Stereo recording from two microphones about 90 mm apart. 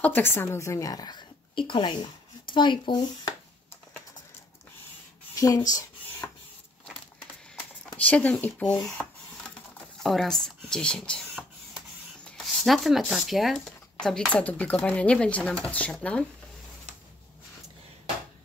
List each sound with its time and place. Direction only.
0.0 s a woman's voice: 25° left (ahead or behind); by 3.3 s 60° left (ahead or behind)
5.3 s speech: 40° left (ahead or behind)
7.9 s speech: 15° left (ahead or behind)
12.6 s speech: centre (ahead or behind)